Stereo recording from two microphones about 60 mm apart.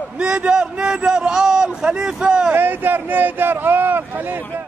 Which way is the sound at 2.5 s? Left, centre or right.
Right.